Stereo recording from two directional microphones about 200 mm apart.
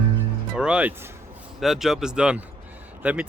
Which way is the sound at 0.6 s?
5° right (ahead or behind).